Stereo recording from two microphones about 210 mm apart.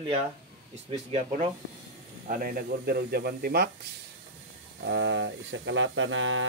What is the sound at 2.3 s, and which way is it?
Speech, 40° right (ahead or behind).